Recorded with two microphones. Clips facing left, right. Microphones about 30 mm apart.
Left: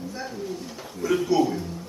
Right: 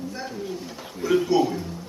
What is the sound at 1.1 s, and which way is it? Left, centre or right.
Speech, centre.